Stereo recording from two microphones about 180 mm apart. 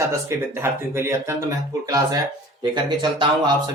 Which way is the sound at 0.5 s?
15° right (ahead or behind).